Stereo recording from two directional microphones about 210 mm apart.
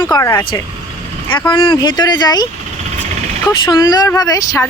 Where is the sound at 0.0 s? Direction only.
15° left (ahead or behind).